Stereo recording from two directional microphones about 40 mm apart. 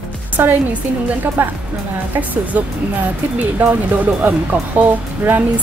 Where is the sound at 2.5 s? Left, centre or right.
Right.